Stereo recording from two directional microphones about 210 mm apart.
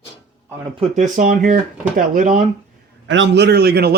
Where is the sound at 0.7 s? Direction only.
30° right (ahead or behind).